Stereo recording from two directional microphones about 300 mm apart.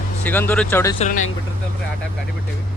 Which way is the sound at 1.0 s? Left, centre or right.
Left.